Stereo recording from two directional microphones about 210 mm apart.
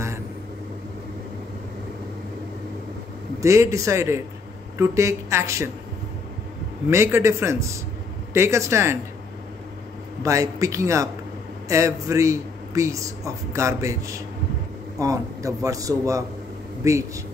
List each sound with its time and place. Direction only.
3.3 s a man's voice: 15° right (ahead or behind)
6.9 s a man's voice: 15° right (ahead or behind)
10.2 s a man's voice: 15° right (ahead or behind)